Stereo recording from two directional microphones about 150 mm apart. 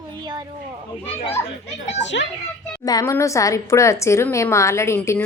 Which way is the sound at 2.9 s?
25° left (ahead or behind).